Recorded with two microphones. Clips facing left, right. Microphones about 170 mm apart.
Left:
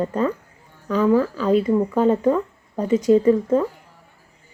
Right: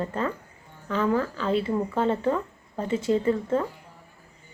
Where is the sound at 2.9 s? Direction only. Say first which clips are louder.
Left 8 dB; 25° right (ahead or behind).